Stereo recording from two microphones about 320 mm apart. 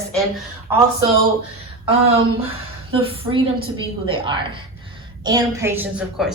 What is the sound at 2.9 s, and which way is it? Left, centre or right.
A woman's voice, centre.